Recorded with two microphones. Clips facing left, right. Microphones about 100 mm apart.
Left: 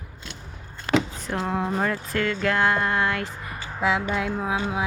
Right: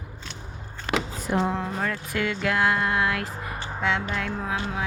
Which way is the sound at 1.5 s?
10° left (ahead or behind).